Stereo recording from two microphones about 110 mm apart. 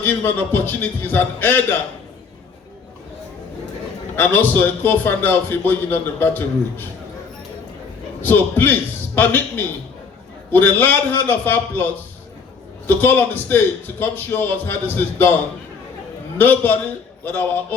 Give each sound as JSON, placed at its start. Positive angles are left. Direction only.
{"t": 0.0, "sound": "a man's voice", "side_deg": 20}
{"t": 4.2, "sound": "a man's voice", "side_deg": 15}
{"t": 8.2, "sound": "a man's voice", "side_deg": 15}
{"t": 13.0, "sound": "a man's voice", "side_deg": 20}
{"t": 16.4, "sound": "a man's voice", "side_deg": 15}